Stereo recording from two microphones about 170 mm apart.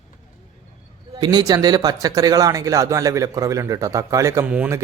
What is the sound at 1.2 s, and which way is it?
Speech, 25° right (ahead or behind).